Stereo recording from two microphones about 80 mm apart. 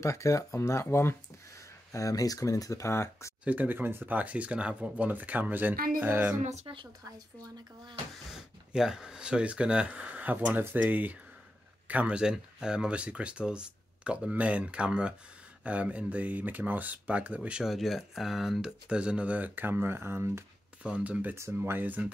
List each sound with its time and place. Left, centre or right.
0.0 s speech: left
1.9 s speech: left
3.4 s speech: right
8.3 s speech: centre
17.6 s speech: centre; by 20.4 s right
20.8 s speech: centre
21.4 s speech: right